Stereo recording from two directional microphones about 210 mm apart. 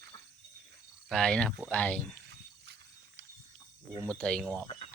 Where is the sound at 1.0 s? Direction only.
5° left (ahead or behind).